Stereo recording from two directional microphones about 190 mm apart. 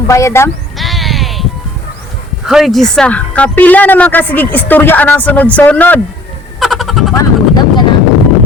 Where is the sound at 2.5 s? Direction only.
Centre (ahead or behind).